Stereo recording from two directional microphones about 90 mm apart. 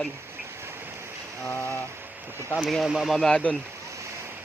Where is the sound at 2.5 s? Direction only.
Centre (ahead or behind).